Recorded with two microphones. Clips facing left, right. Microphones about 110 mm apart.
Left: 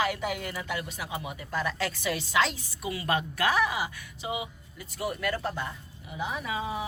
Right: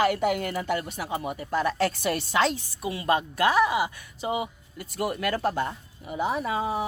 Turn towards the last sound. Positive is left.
turn(degrees=-45)  # may be behind; listen again after turning